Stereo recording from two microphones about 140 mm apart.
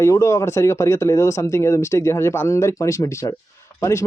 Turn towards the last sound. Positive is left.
turn(degrees=20)  # may be behind; listen again after turning